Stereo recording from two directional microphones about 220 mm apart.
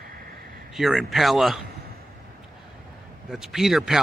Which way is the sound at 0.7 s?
Centre (ahead or behind).